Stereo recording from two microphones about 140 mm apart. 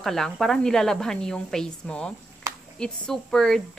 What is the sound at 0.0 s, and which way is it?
A woman's voice, 5° left (ahead or behind).